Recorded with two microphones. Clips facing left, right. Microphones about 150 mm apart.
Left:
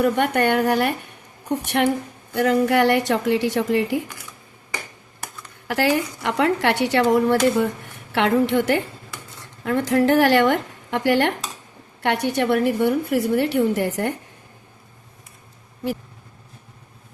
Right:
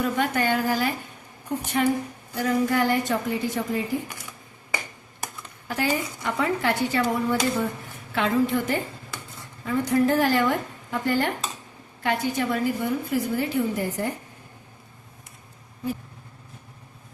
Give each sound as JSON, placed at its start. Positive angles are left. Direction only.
{"t": 0.0, "sound": "a woman's voice", "side_deg": 65}
{"t": 5.6, "sound": "a woman's voice", "side_deg": 80}
{"t": 7.3, "sound": "a woman's voice", "side_deg": 70}